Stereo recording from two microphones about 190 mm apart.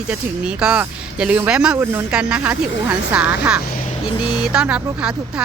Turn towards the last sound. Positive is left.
turn(degrees=-5)  # may be behind; listen again after turning